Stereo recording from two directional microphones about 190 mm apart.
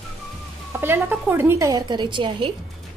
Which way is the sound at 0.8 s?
10° right (ahead or behind).